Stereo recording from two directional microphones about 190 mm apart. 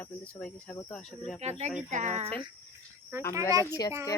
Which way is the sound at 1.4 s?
35° right (ahead or behind).